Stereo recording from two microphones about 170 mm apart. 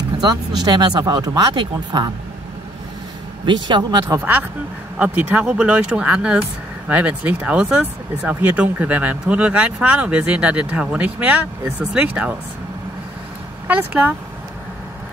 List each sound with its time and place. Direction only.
0.7 s speech: 25° right (ahead or behind)
3.6 s speech: 25° right (ahead or behind)
4.2 s speech: 10° right (ahead or behind)
13.7 s speech: 10° right (ahead or behind)